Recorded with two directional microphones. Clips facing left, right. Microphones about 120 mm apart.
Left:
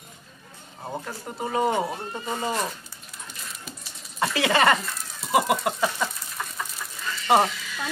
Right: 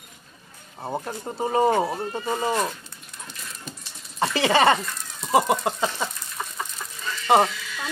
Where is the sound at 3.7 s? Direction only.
5° left (ahead or behind).